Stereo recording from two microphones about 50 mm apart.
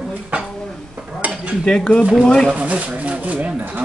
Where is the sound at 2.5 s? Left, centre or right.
Right.